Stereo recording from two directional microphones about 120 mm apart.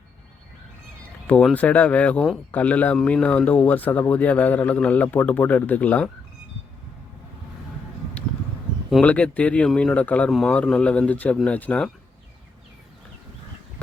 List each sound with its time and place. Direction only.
1.3 s speech: 10° left (ahead or behind)
9.0 s speech: 10° left (ahead or behind)